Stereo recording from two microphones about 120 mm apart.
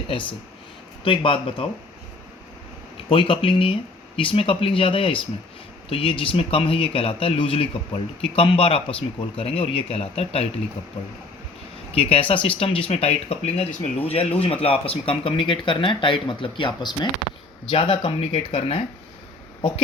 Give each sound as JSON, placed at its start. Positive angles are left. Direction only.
{"t": 0.1, "sound": "speech", "side_deg": 45}
{"t": 3.1, "sound": "speech", "side_deg": 45}
{"t": 11.9, "sound": "speech", "side_deg": 50}